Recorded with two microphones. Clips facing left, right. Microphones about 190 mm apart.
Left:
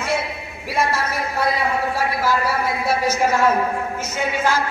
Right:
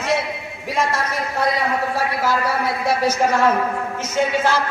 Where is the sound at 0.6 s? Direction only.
10° left (ahead or behind).